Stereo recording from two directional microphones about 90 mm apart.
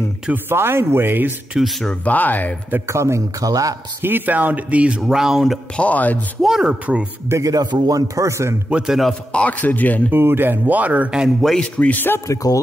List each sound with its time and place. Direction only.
0.3 s speech: 25° right (ahead or behind)
1.5 s a man's voice: centre (ahead or behind)
1.9 s speech: 15° left (ahead or behind)
2.9 s speech: 30° right (ahead or behind)
4.0 s speech: 20° right (ahead or behind); by 5.6 s 5° right (ahead or behind)
5.8 s speech: 15° left (ahead or behind)
6.4 s speech: 10° right (ahead or behind)
7.2 s speech: 35° right (ahead or behind)
7.7 s speech: 45° right (ahead or behind)
8.6 s a man's voice: 10° right (ahead or behind)
9.3 s speech: 15° left (ahead or behind)
10.1 s speech: 25° right (ahead or behind)
11.4 s speech: 10° left (ahead or behind)